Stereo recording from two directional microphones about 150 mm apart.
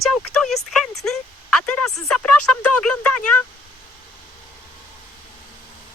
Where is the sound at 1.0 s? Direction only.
Centre (ahead or behind).